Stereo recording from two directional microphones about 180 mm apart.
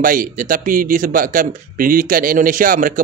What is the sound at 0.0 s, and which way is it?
Speech, 50° right (ahead or behind).